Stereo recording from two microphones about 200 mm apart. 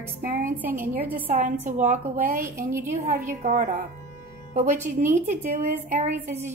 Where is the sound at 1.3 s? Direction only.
35° right (ahead or behind).